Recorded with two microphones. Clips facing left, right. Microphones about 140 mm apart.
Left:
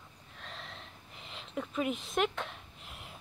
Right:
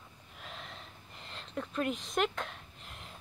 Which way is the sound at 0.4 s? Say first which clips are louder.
Even; 5° right (ahead or behind).